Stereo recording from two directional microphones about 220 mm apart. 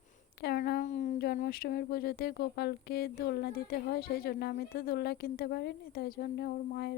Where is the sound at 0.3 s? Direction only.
45° left (ahead or behind).